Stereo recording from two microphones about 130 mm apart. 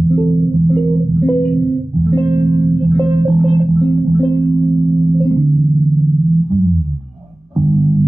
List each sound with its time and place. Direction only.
3.3 s music: 50° right (ahead or behind)
4.5 s music: 30° right (ahead or behind)